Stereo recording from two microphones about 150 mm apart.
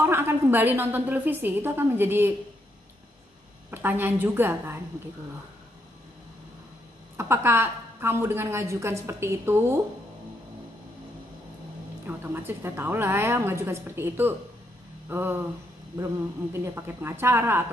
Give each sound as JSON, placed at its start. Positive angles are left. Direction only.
{"t": 0.0, "sound": "a woman's voice", "side_deg": -15}
{"t": 3.7, "sound": "a woman's voice", "side_deg": -15}
{"t": 7.2, "sound": "a woman's voice", "side_deg": -15}
{"t": 12.1, "sound": "a woman's voice", "side_deg": -15}
{"t": 16.7, "sound": "a woman's voice", "side_deg": -15}